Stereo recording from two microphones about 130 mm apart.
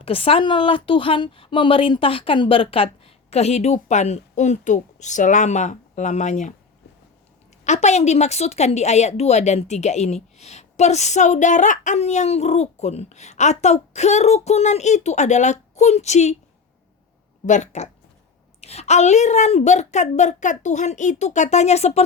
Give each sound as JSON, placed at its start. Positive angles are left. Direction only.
{"t": 0.0, "sound": "speech", "side_deg": 45}
{"t": 7.6, "sound": "speech", "side_deg": 60}
{"t": 17.4, "sound": "speech", "side_deg": 70}